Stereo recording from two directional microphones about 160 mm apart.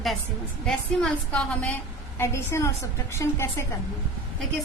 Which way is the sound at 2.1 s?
15° left (ahead or behind).